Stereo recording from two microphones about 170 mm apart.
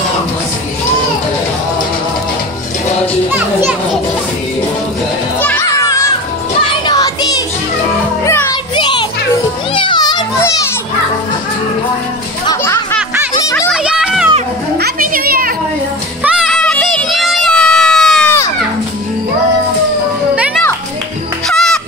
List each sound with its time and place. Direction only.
3.3 s children playing: 10° right (ahead or behind)
5.4 s children playing: 15° left (ahead or behind)
6.9 s child singing: 20° left (ahead or behind)
8.3 s music: 15° left (ahead or behind)
8.7 s children playing: 25° left (ahead or behind)
12.4 s children playing: 15° left (ahead or behind)
13.7 s children playing: 5° right (ahead or behind)
14.8 s music: 60° right (ahead or behind)
16.3 s a sound: 5° left (ahead or behind)
21.5 s music: 5° left (ahead or behind)